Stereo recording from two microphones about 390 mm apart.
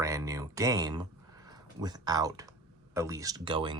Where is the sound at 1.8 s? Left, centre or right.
Centre.